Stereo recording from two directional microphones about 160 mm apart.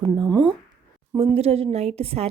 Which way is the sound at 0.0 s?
25° right (ahead or behind).